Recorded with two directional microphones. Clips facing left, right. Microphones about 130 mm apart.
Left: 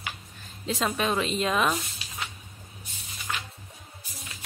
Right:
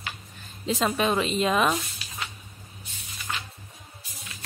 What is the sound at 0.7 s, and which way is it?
Speech, 5° right (ahead or behind).